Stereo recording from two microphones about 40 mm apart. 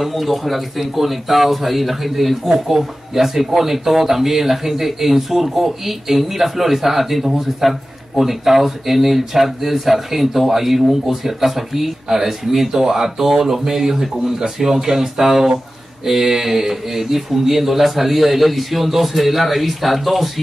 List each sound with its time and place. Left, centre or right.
0.0 s speech: centre